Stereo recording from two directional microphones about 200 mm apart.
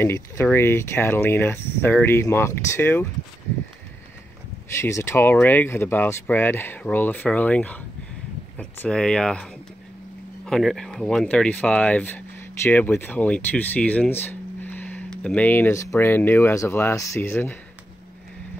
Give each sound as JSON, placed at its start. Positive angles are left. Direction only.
{"t": 0.0, "sound": "speech", "side_deg": 15}
{"t": 4.7, "sound": "speech", "side_deg": 15}